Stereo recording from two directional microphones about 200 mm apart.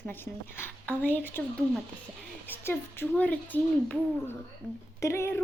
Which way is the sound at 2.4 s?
10° left (ahead or behind).